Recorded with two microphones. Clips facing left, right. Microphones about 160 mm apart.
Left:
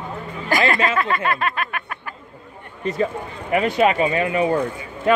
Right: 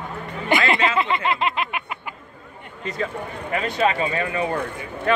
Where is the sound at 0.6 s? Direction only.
20° right (ahead or behind).